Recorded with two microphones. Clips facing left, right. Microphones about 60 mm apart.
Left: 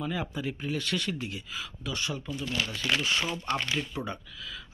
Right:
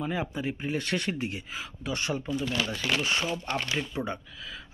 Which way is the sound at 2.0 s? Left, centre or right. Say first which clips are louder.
Right 4 dB; right.